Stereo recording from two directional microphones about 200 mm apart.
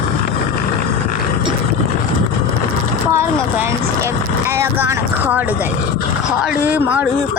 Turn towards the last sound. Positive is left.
turn(degrees=-10)  # may be behind; listen again after turning